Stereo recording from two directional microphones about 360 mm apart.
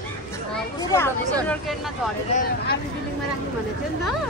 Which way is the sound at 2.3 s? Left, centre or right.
Left.